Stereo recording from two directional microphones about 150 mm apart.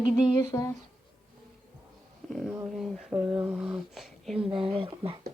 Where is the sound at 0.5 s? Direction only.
15° left (ahead or behind).